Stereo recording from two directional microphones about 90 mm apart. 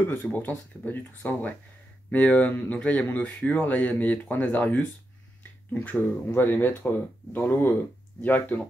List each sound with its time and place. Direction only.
0.3 s speech: 20° left (ahead or behind)